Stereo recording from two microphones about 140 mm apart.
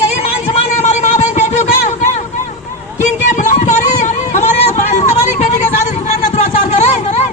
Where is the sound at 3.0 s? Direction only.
65° left (ahead or behind).